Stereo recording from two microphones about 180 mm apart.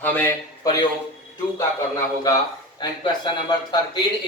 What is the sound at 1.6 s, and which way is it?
A man's voice, 15° left (ahead or behind).